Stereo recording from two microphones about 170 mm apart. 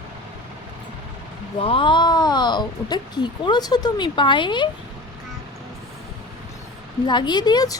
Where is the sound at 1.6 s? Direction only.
30° left (ahead or behind).